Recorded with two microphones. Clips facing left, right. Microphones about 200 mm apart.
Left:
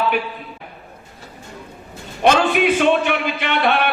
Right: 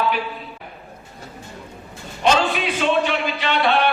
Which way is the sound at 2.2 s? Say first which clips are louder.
Left 4 dB; 55° left (ahead or behind).